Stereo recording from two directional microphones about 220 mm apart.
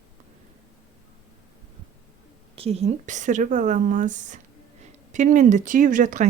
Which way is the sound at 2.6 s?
25° right (ahead or behind).